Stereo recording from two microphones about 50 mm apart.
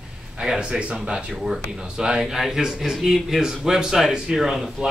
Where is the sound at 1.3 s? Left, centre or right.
Centre.